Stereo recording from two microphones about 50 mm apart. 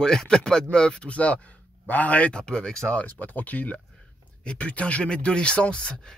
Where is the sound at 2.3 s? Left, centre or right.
Centre.